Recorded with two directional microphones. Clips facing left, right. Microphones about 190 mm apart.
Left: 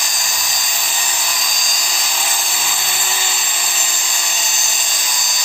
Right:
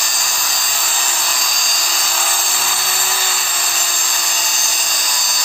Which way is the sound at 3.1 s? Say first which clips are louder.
Right 1 dB; 20° left (ahead or behind).